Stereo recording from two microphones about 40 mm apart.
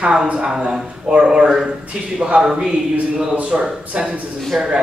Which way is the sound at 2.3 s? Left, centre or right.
Right.